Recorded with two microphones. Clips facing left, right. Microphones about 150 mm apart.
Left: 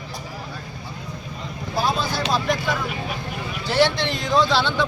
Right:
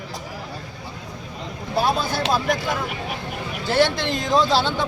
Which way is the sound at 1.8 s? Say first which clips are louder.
Right 1 dB; 50° right (ahead or behind).